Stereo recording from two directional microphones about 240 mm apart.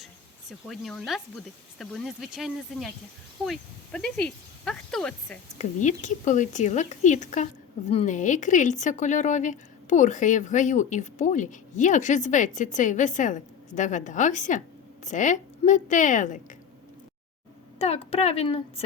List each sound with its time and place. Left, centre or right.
0.7 s speech: centre
5.5 s a woman's voice: left
17.7 s speech: left